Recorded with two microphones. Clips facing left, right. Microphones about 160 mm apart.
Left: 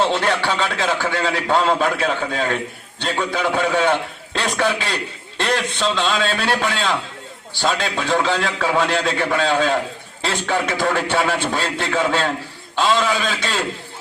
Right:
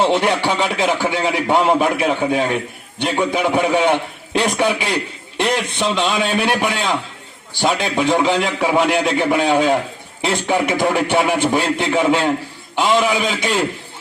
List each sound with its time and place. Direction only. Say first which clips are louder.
0.0 s a man's voice: right 3 dB; 15° right (ahead or behind)